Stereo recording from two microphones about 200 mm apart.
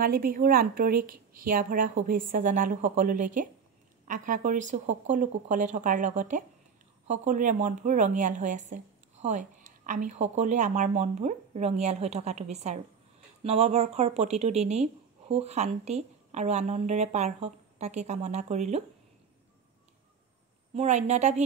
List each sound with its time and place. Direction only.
0.0 s a woman's voice: 45° right (ahead or behind)
20.7 s a woman's voice: 35° right (ahead or behind)